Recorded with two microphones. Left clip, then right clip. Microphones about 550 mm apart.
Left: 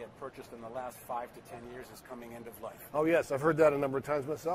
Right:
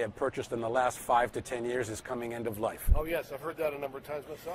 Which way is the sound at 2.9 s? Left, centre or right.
Left.